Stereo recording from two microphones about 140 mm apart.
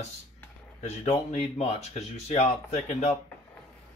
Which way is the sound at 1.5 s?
55° left (ahead or behind).